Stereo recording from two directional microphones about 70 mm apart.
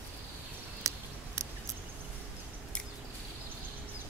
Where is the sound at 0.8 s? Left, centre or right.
Right.